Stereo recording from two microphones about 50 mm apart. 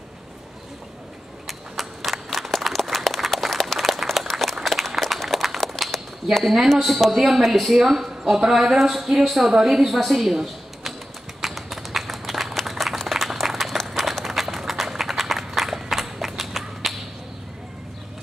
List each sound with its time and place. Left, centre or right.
1.5 s a sound: centre
6.7 s a woman's voice: centre
11.4 s clapping: centre
14.1 s run: centre